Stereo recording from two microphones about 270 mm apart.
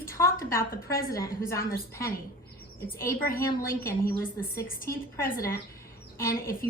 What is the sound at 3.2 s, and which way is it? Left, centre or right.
Speech, left.